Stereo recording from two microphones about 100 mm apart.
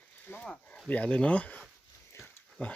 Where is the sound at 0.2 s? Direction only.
15° left (ahead or behind).